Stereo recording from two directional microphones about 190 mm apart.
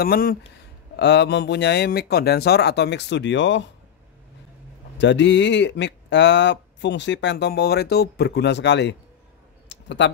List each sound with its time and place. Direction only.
0.0 s speech: 50° left (ahead or behind)
0.9 s speech: 65° left (ahead or behind)
4.9 s speech: 70° left (ahead or behind)
9.7 s clicking: 70° left (ahead or behind)